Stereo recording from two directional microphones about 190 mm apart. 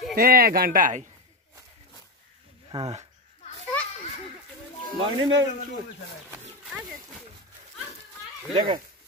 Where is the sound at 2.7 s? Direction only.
30° right (ahead or behind).